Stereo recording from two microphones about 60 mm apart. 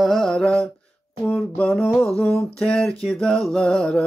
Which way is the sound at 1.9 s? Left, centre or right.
Centre.